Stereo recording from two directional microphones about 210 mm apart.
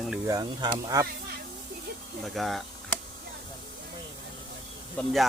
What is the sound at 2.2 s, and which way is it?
Speech, centre (ahead or behind).